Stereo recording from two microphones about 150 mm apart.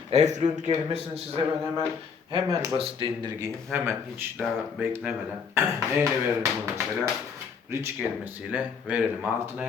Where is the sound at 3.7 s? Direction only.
15° right (ahead or behind).